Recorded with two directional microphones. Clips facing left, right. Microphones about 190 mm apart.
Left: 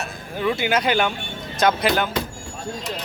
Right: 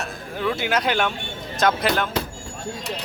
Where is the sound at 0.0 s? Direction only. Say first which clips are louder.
Left 2 dB; centre (ahead or behind).